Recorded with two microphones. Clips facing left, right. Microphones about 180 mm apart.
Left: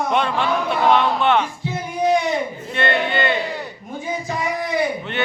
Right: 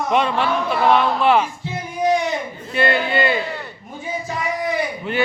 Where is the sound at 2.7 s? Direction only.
5° right (ahead or behind).